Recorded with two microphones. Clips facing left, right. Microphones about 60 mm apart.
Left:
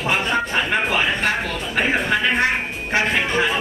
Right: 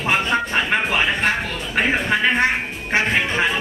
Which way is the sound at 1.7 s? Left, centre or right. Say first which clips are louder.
Right 1 dB; centre.